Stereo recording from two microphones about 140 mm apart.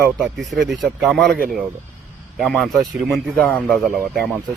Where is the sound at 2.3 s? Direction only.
Centre (ahead or behind).